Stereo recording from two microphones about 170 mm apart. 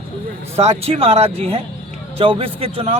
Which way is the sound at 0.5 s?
35° right (ahead or behind).